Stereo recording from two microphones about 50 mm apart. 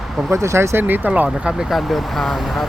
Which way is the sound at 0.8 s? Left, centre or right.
Right.